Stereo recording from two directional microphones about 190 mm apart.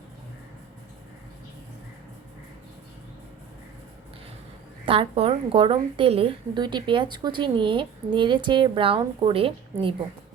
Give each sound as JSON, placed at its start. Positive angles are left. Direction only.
{"t": 4.9, "sound": "a woman's voice", "side_deg": -30}